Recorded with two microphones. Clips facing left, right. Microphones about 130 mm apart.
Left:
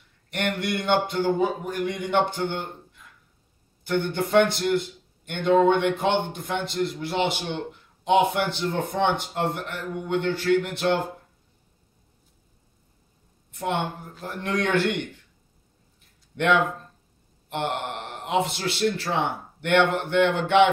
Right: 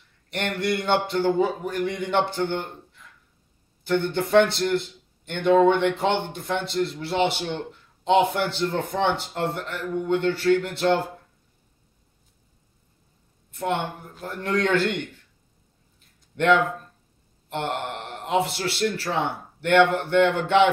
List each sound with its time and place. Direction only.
0.3 s a man's voice: 15° left (ahead or behind)
3.8 s a man's voice: 15° left (ahead or behind)
14.2 s a man's voice: 15° left (ahead or behind)
16.3 s a man's voice: 15° left (ahead or behind)